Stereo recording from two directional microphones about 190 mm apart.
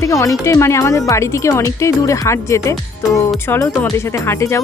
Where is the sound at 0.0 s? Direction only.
15° left (ahead or behind).